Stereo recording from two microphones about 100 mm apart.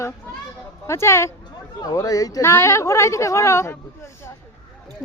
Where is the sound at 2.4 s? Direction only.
25° left (ahead or behind).